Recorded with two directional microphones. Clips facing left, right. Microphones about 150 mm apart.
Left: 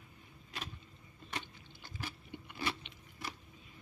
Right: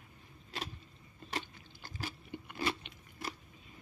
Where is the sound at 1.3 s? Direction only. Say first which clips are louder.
Right 3 dB; 40° right (ahead or behind).